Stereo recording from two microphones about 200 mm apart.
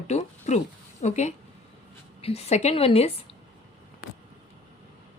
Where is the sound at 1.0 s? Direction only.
35° left (ahead or behind).